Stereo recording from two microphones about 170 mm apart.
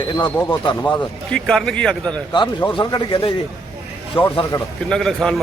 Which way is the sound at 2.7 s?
25° left (ahead or behind).